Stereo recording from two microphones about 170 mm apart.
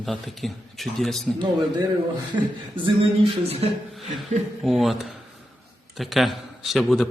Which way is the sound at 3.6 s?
35° right (ahead or behind).